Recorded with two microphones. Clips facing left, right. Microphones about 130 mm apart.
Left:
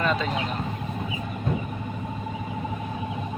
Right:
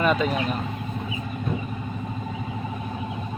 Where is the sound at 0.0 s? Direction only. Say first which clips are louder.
Right 4 dB; 15° right (ahead or behind).